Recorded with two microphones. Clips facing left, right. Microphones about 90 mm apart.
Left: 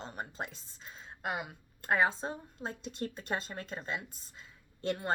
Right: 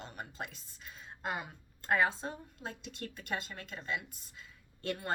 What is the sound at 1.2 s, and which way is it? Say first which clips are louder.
A woman's voice: left 2 dB; 15° left (ahead or behind).